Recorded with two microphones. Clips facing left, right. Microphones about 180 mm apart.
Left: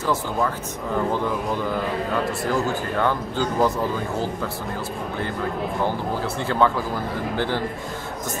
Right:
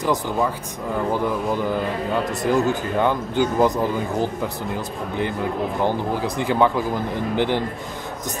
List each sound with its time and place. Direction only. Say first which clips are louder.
0.0 s speech: right 2 dB; 15° right (ahead or behind)
2.4 s speech: right 4 dB; 20° right (ahead or behind)
5.9 s a man's voice: right 3 dB; 15° right (ahead or behind)